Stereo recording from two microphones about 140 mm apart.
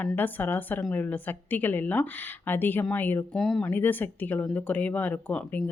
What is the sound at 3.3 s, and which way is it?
Speech, centre (ahead or behind).